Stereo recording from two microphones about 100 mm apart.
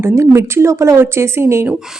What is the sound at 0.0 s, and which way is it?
Speech, 30° right (ahead or behind).